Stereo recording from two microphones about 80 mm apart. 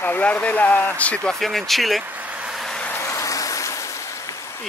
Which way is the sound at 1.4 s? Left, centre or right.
Centre.